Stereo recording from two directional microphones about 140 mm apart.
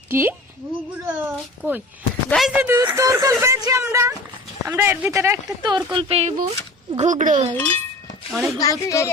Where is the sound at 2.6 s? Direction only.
15° right (ahead or behind).